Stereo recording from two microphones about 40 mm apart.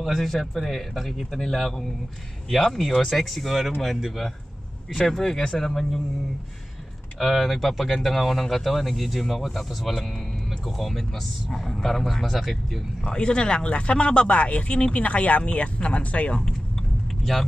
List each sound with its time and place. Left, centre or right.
0.0 s speech: centre
4.9 s speech: centre
7.2 s speech: centre
13.0 s speech: left
17.2 s speech: centre